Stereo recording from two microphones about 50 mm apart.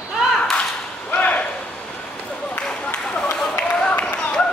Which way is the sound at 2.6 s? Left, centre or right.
Centre.